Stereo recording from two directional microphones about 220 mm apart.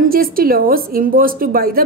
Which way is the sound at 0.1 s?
40° right (ahead or behind).